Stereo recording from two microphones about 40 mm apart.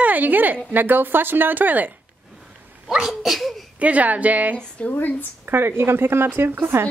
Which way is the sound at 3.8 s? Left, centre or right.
Right.